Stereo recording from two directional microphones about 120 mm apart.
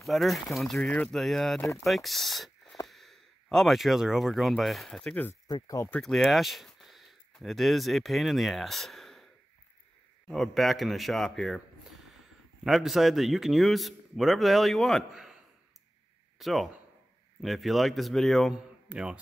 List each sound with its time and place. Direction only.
0.0 s a man's voice: centre (ahead or behind)
5.5 s speech: 30° left (ahead or behind)
5.9 s a man's voice: 5° left (ahead or behind)
12.6 s a man's voice: centre (ahead or behind)
16.3 s a man's voice: centre (ahead or behind)